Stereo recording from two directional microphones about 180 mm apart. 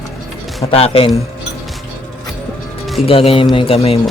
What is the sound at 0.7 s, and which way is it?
Speech, 30° left (ahead or behind).